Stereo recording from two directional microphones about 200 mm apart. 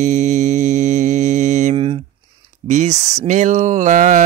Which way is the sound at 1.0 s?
35° right (ahead or behind).